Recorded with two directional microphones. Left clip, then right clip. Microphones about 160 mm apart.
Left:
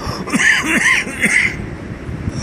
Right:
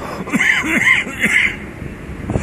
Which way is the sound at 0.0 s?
15° right (ahead or behind).